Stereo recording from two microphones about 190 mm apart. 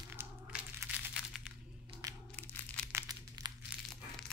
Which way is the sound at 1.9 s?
30° right (ahead or behind).